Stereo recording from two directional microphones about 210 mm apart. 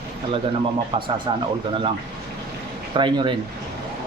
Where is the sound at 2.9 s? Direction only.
20° right (ahead or behind).